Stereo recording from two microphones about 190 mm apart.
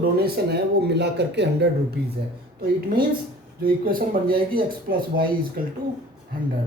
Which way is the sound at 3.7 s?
50° right (ahead or behind).